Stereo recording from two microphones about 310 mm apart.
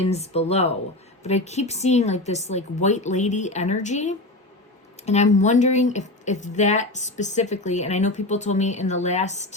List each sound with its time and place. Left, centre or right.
0.0 s speech: centre